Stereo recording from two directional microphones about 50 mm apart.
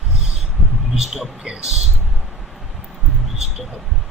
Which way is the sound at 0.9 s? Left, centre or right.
Centre.